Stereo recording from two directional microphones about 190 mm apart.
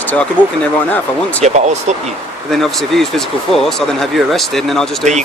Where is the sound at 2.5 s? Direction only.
Centre (ahead or behind).